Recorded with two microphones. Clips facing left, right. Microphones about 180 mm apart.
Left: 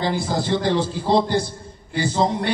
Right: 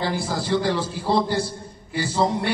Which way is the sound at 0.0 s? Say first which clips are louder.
Left 3 dB; 20° left (ahead or behind).